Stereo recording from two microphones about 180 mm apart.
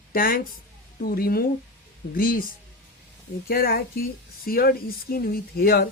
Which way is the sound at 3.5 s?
55° left (ahead or behind).